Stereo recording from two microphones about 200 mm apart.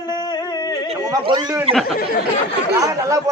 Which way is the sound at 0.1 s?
20° left (ahead or behind).